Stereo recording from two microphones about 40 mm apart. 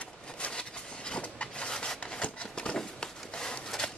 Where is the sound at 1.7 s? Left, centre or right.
Centre.